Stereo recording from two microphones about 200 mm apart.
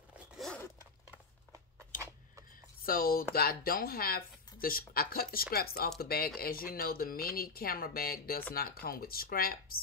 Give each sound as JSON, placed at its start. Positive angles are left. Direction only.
{"t": 2.8, "sound": "speech", "side_deg": 45}